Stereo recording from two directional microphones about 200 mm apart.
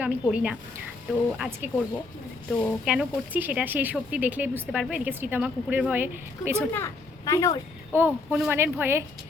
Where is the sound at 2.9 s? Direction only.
5° right (ahead or behind).